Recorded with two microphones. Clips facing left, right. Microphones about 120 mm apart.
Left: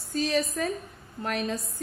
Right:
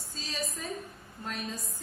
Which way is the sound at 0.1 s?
65° left (ahead or behind).